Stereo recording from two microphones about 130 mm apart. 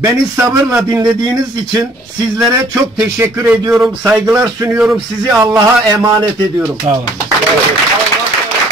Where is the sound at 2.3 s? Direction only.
20° right (ahead or behind).